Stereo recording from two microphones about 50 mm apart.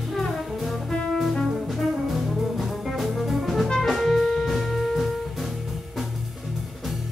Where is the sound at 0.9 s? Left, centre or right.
Centre.